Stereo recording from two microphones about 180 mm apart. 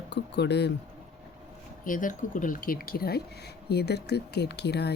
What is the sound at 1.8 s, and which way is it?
Speech, 45° left (ahead or behind).